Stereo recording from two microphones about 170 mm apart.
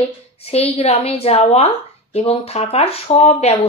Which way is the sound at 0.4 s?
35° left (ahead or behind).